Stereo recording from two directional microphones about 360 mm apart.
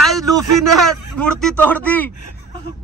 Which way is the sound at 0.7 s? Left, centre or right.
Centre.